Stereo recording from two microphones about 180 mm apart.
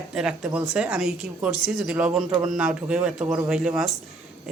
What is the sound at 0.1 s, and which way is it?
Speech, 5° right (ahead or behind).